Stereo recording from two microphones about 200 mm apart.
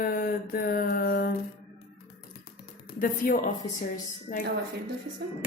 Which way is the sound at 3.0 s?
40° left (ahead or behind).